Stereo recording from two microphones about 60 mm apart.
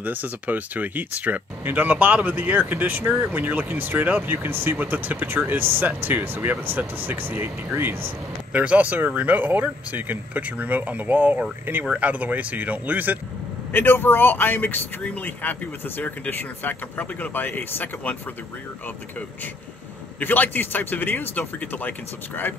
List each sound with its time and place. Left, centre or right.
0.0 s speech: right
8.5 s speech: right
13.7 s speech: left
20.2 s speech: left